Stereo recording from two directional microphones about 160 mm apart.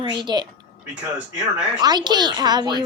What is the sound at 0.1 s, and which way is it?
Speech, 30° right (ahead or behind).